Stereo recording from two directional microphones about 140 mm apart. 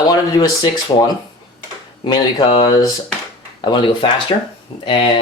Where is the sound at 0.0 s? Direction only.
30° left (ahead or behind).